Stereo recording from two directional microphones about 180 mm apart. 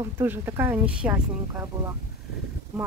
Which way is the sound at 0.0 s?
15° right (ahead or behind).